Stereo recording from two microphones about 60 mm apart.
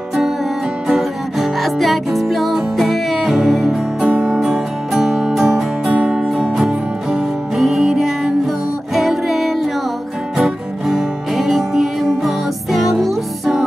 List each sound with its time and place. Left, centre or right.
0.8 s music: centre
4.1 s music: centre
4.4 s music: centre
5.9 s music: centre
6.1 s music: centre